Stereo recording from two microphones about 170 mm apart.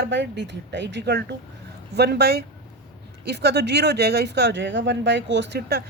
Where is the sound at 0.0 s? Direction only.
90° right.